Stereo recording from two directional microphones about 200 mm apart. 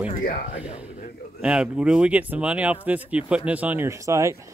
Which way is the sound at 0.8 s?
35° left (ahead or behind).